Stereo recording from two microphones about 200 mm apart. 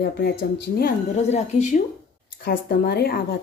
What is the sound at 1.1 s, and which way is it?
Speech, 35° left (ahead or behind).